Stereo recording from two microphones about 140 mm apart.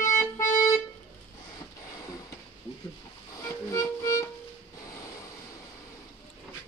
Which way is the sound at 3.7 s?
20° left (ahead or behind).